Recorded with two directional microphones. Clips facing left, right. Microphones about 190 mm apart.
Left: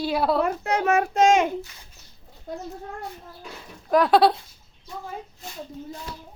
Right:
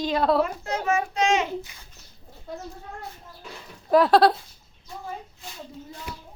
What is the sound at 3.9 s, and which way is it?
Speech, centre (ahead or behind).